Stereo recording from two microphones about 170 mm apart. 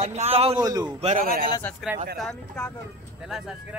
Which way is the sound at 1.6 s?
10° left (ahead or behind).